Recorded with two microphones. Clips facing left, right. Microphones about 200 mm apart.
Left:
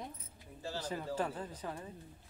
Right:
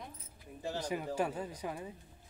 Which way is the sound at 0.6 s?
15° right (ahead or behind).